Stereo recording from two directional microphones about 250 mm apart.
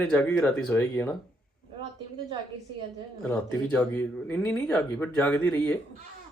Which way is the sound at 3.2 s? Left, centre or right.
Centre.